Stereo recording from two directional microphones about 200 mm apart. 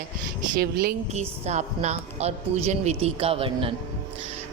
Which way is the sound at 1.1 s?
35° right (ahead or behind).